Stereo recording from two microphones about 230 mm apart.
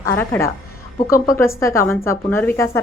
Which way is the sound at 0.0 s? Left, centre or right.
Centre.